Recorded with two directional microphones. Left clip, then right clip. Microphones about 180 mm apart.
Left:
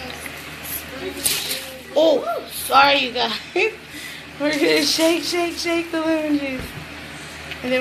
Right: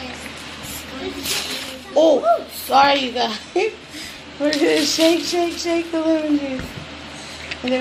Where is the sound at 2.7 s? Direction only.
20° right (ahead or behind).